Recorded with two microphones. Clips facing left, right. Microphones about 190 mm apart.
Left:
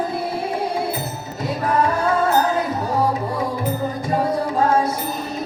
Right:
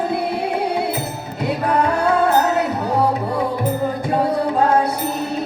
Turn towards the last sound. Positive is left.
turn(degrees=-65)  # may be behind; listen again after turning